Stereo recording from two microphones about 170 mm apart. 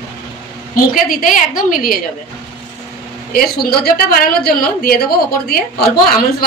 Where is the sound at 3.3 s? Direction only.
65° left (ahead or behind).